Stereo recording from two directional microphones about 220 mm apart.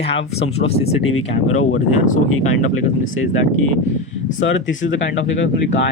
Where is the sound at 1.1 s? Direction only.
75° left (ahead or behind).